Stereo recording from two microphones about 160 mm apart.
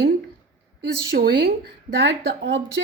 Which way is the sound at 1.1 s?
85° right.